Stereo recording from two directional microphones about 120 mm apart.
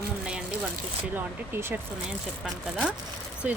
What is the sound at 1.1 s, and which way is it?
Speech, 20° right (ahead or behind).